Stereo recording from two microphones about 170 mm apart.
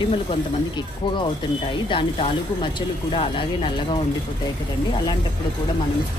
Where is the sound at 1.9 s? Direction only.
30° left (ahead or behind).